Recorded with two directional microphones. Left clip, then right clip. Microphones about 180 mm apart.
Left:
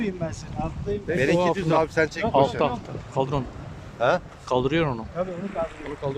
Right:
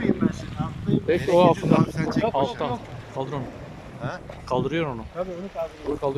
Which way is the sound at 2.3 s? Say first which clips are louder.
Left 4 dB; 5° left (ahead or behind).